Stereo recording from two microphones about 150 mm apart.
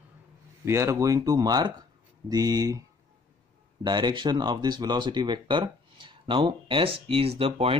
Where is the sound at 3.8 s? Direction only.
30° right (ahead or behind).